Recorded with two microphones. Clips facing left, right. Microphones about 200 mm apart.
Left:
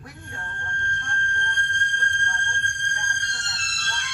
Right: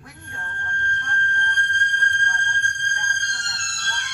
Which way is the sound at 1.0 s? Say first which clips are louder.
Right 3 dB; 65° right (ahead or behind).